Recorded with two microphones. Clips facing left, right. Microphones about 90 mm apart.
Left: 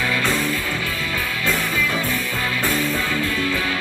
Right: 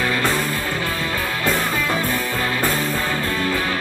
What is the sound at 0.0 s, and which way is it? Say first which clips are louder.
Music: right 1 dB; 40° right (ahead or behind).